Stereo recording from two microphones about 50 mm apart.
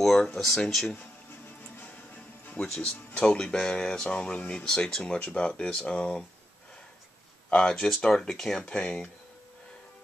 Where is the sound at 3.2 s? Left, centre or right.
Centre.